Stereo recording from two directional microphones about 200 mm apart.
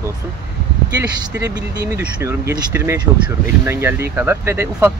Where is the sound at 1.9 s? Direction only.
10° right (ahead or behind).